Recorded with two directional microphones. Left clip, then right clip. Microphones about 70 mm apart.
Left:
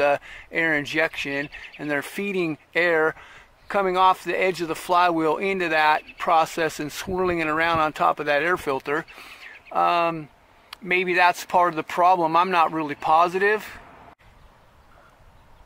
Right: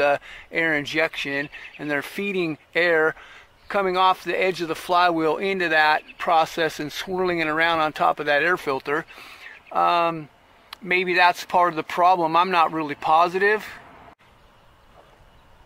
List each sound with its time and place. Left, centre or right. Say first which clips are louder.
0.0 s speech: even; centre
0.6 s speech: even; centre
1.5 s speech: even; centre
2.8 s speech: right 1 dB; centre
3.1 s a sound: right 1 dB; left
3.9 s speech: left 1 dB; left
9.1 s speech: even; centre
11.3 s speech: even; centre
12.3 s speech: even; centre
13.4 s speech: right 1 dB; centre